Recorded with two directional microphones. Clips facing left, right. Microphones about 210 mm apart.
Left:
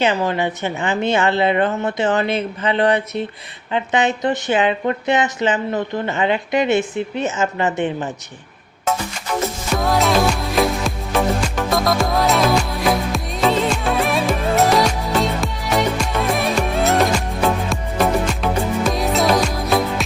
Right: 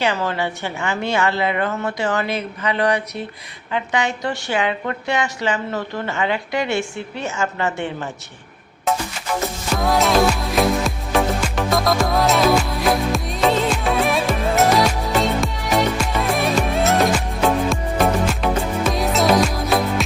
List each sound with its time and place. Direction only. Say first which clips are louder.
0.0 s a woman's voice: left 3 dB; 15° left (ahead or behind)
9.7 s music: even; centre (ahead or behind)